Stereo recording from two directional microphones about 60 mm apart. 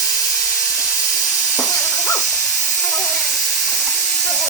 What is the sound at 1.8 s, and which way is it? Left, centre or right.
Dog, centre.